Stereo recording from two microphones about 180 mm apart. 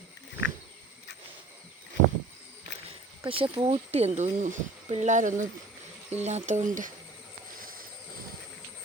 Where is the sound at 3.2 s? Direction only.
30° right (ahead or behind); by 6.9 s 45° right (ahead or behind).